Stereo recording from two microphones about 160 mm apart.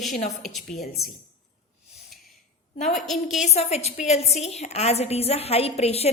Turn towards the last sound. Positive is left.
turn(degrees=40)  # may be behind; listen again after turning